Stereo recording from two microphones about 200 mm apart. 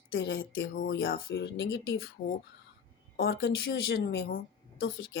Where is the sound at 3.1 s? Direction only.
50° left (ahead or behind).